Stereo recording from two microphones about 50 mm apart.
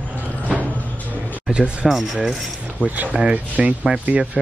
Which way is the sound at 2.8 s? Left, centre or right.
Right.